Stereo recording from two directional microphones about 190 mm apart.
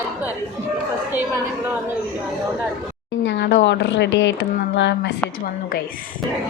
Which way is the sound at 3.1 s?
70° left (ahead or behind).